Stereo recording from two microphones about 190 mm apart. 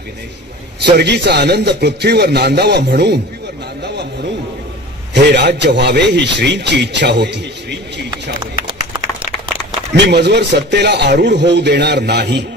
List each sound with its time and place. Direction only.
0.9 s a man's voice: 65° right (ahead or behind)
3.8 s a sound: 60° right (ahead or behind)
5.1 s a man's voice: 65° right (ahead or behind)
9.9 s a man's voice: 60° right (ahead or behind)